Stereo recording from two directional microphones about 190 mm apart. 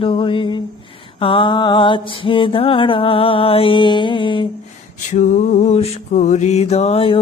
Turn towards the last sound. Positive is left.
turn(degrees=30)  # may be behind; listen again after turning